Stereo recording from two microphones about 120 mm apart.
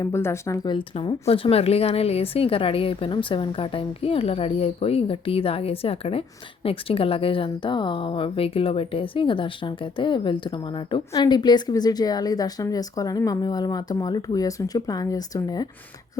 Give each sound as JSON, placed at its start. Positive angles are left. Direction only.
{"t": 0.0, "sound": "speech", "side_deg": 20}
{"t": 0.7, "sound": "a woman's voice", "side_deg": 40}
{"t": 1.3, "sound": "a woman's voice", "side_deg": 55}